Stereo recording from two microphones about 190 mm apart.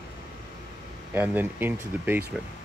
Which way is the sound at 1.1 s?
10° right (ahead or behind).